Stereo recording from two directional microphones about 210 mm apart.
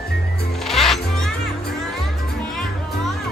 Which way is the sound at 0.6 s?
Centre (ahead or behind).